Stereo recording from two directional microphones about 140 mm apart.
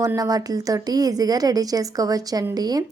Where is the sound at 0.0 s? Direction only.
25° right (ahead or behind).